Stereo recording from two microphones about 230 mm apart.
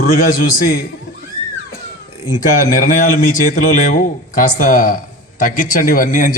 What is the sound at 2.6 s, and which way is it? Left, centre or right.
A man's voice, left.